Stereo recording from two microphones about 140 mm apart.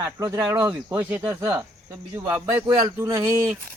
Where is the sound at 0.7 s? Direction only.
10° right (ahead or behind).